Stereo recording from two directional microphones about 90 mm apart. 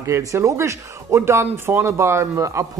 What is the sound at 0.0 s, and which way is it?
Speech, 35° right (ahead or behind).